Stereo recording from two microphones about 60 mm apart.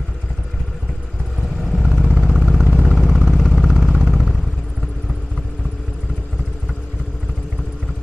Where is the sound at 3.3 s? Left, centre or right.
Centre.